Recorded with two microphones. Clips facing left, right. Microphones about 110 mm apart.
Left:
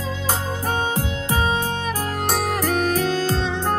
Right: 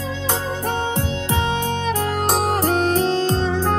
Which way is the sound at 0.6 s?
30° right (ahead or behind).